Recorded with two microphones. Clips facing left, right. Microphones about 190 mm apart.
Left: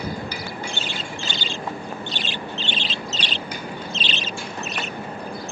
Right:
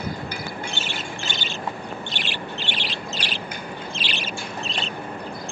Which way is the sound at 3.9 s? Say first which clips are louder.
Left 2 dB; 25° left (ahead or behind).